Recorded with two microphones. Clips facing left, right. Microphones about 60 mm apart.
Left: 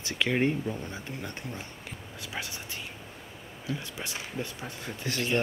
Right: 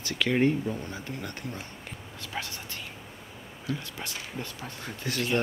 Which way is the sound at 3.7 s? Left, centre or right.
Centre.